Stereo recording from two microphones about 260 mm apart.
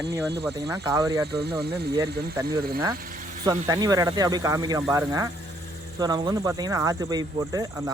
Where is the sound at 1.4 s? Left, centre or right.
Right.